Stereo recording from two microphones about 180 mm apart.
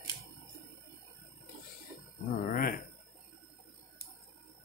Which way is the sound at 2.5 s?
50° left (ahead or behind).